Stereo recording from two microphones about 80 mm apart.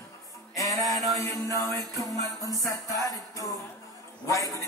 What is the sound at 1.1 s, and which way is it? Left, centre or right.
Music, left.